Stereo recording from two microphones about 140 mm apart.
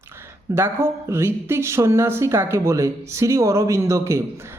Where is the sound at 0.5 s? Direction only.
15° right (ahead or behind).